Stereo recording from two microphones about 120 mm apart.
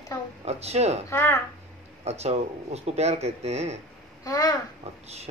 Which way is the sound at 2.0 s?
60° right (ahead or behind).